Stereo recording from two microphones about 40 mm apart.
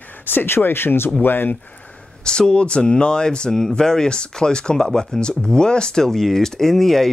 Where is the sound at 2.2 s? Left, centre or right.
Left.